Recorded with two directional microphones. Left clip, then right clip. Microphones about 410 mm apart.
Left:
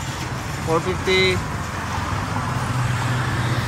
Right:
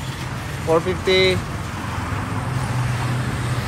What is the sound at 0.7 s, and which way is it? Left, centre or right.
Speech, centre.